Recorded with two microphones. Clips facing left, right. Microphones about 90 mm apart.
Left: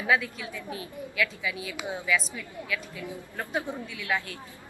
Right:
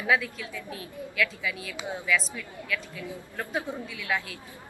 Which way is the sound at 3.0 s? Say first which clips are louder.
Even; 20° left (ahead or behind).